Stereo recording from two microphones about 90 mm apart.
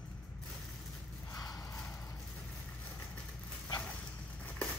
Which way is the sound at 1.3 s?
45° left (ahead or behind).